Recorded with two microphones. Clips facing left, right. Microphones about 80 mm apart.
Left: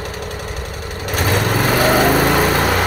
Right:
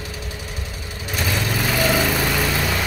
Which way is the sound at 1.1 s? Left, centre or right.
Left.